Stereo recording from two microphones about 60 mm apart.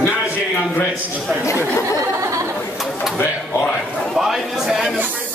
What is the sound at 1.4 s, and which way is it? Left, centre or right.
Speech, left.